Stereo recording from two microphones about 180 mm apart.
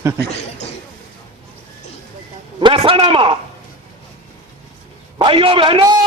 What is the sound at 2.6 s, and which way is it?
Speech, 30° right (ahead or behind).